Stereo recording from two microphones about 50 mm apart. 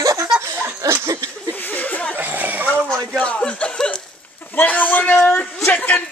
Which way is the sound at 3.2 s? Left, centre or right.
Left.